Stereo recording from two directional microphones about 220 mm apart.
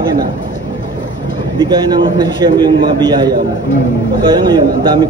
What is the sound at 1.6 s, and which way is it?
A man's voice, 20° right (ahead or behind).